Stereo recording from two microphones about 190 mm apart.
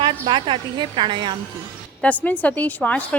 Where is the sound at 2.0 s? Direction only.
10° left (ahead or behind).